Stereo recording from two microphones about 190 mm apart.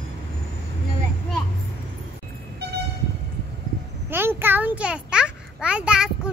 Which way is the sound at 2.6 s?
60° right (ahead or behind).